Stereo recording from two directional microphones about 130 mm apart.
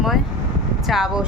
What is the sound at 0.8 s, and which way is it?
Speech, 5° right (ahead or behind).